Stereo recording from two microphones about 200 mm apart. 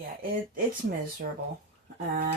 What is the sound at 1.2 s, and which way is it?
Speech, 45° right (ahead or behind).